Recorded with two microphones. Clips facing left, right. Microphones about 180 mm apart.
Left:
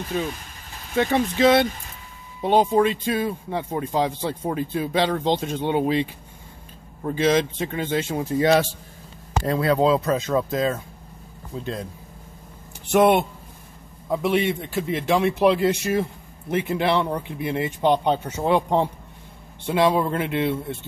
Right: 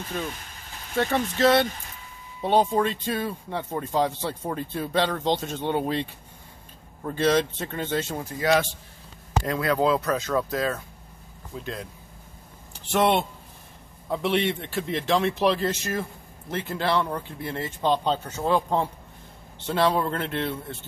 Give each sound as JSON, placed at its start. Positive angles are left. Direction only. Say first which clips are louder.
{"t": 0.9, "sound": "a man's voice", "louder": "left 4 dB", "side_deg": 15}
{"t": 7.1, "sound": "a man's voice", "louder": "left 2 dB", "side_deg": 10}
{"t": 11.6, "sound": "speech", "louder": "left 5 dB", "side_deg": 35}
{"t": 12.9, "sound": "a man's voice", "louder": "left 5 dB", "side_deg": 10}